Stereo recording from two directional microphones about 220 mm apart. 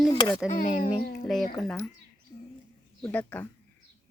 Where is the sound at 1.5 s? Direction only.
Centre (ahead or behind).